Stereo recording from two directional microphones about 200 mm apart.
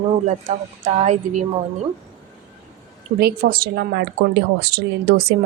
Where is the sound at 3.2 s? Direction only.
45° right (ahead or behind).